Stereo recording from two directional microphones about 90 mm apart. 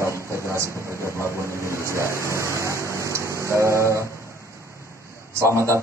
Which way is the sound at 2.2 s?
30° right (ahead or behind).